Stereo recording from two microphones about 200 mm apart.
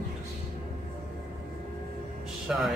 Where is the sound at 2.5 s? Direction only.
5° right (ahead or behind).